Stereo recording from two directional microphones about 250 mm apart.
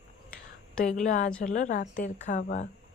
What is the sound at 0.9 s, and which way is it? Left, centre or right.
A woman's voice, left.